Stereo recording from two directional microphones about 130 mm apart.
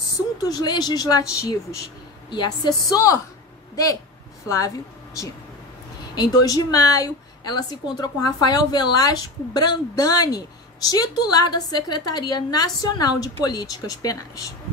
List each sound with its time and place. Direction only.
0.5 s a woman's voice: 30° left (ahead or behind)